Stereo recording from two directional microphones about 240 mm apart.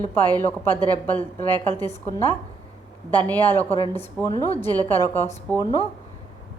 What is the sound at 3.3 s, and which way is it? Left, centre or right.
A woman's voice, centre.